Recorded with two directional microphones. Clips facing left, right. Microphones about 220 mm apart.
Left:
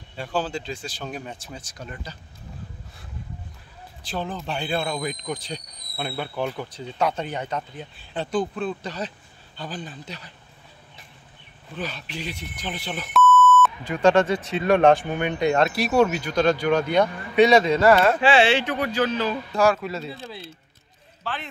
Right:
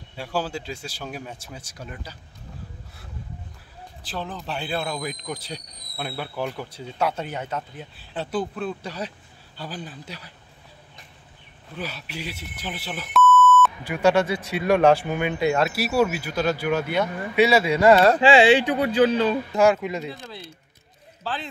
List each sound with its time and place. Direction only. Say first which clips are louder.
0.1 s speech: left 1 dB; 10° right (ahead or behind)
4.0 s speech: left 3 dB; centre (ahead or behind)
11.7 s speech: left 1 dB; 10° right (ahead or behind)
13.8 s speech: left 3 dB; 10° right (ahead or behind)
17.9 s speech: right 2 dB; 35° right (ahead or behind)
18.3 s speech: right 3 dB; 15° right (ahead or behind)
21.2 s speech: right 2 dB; 35° right (ahead or behind)